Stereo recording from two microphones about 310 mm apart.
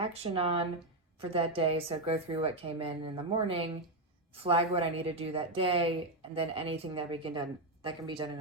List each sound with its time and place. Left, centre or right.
0.0 s a woman's voice: centre